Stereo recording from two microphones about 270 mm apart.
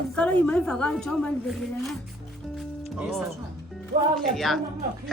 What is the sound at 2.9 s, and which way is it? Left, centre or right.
A woman's voice, centre.